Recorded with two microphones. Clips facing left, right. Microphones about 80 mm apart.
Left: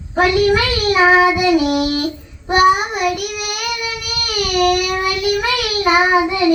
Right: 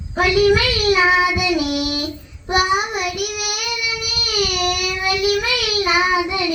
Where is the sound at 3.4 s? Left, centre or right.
Left.